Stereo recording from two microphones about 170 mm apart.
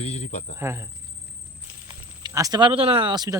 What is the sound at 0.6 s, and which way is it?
Speech, 15° right (ahead or behind).